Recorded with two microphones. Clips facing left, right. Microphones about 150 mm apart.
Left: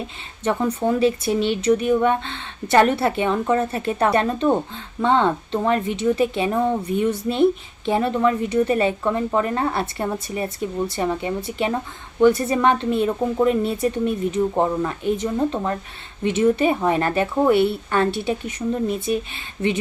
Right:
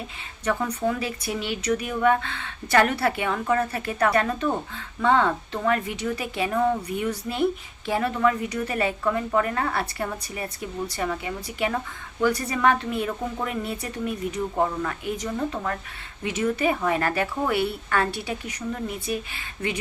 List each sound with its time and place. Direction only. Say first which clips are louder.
0.4 s speech: left 4 dB; 30° left (ahead or behind)